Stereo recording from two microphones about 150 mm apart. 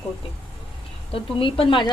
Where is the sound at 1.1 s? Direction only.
35° left (ahead or behind).